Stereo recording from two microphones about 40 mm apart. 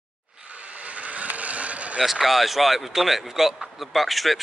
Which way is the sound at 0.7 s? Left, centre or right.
Right.